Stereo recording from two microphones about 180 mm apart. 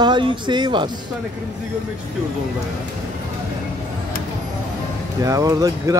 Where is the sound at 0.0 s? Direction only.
25° right (ahead or behind).